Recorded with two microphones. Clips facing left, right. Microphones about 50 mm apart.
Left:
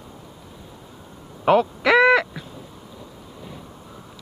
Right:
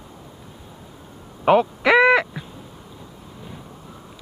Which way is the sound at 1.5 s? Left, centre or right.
Centre.